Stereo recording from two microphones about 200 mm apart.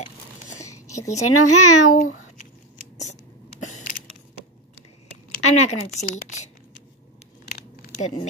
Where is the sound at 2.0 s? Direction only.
90° left.